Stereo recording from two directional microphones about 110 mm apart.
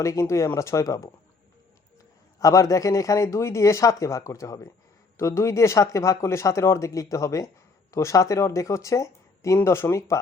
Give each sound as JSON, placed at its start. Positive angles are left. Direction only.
{"t": 0.0, "sound": "speech", "side_deg": 25}
{"t": 2.4, "sound": "speech", "side_deg": 30}